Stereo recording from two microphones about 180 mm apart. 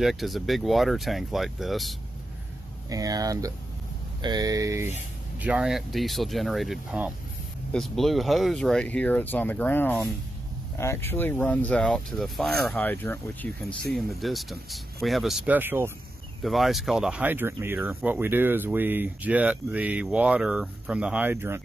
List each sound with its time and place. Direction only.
0.0 s speech: centre (ahead or behind)
2.9 s speech: 20° right (ahead or behind)
5.4 s speech: 5° right (ahead or behind)
16.4 s speech: centre (ahead or behind)